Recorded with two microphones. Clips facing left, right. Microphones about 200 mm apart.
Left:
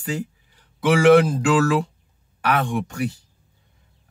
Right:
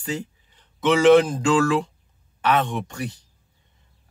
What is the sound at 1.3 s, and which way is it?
Speech, 25° right (ahead or behind).